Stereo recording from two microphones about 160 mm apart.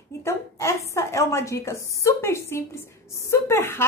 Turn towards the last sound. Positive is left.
turn(degrees=15)  # may be behind; listen again after turning